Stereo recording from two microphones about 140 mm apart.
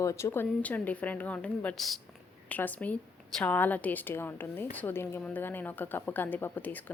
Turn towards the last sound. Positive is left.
turn(degrees=10)  # may be behind; listen again after turning